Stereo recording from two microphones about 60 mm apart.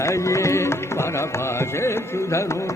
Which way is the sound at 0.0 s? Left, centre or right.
Left.